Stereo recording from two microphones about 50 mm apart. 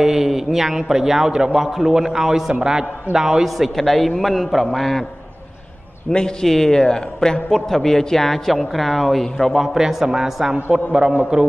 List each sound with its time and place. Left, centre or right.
0.0 s a man's voice: centre
3.5 s a man's voice: centre
6.0 s a man's voice: centre
9.6 s a man's voice: centre